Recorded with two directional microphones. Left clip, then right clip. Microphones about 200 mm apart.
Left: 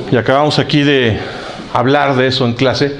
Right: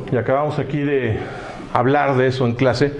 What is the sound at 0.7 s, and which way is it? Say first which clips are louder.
Speech: left 9 dB; 35° left (ahead or behind).